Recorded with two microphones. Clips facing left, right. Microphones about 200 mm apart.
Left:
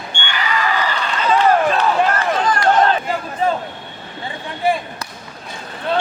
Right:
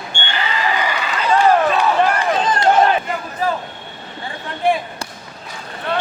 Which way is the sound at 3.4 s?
25° left (ahead or behind).